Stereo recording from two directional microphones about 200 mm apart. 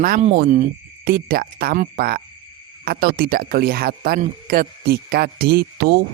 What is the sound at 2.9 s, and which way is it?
Speech, 45° right (ahead or behind).